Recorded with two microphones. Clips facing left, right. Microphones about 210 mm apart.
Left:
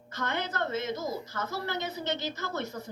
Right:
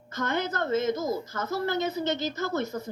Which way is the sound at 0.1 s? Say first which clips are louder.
Right 4 dB; 45° right (ahead or behind).